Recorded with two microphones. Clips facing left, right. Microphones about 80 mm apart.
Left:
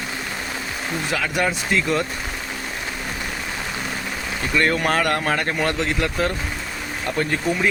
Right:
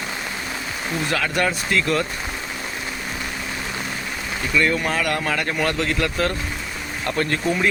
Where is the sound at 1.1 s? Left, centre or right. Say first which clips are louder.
Even; centre.